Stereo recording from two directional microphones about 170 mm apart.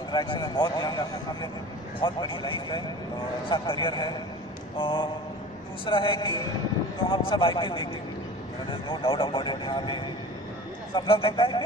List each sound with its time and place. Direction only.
0.1 s a man's voice: 25° left (ahead or behind)
11.0 s speech: 30° left (ahead or behind)